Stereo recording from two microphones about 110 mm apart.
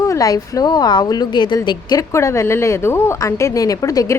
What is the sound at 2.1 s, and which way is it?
A woman's voice, 25° left (ahead or behind).